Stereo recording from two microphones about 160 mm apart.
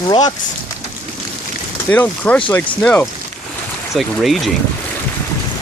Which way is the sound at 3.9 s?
Centre (ahead or behind).